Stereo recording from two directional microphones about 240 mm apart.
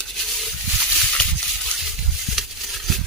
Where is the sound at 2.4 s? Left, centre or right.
Centre.